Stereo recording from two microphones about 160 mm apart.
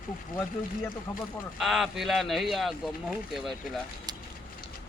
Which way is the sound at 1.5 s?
Centre (ahead or behind).